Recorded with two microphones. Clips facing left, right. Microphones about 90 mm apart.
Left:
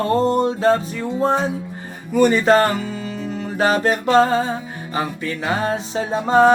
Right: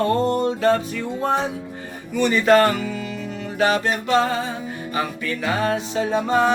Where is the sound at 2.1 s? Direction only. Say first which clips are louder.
Left 2 dB; 40° left (ahead or behind).